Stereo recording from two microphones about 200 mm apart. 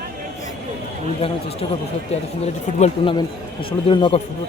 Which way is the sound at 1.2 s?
30° left (ahead or behind).